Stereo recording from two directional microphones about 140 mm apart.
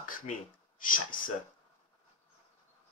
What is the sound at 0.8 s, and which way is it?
Speech, 75° left (ahead or behind).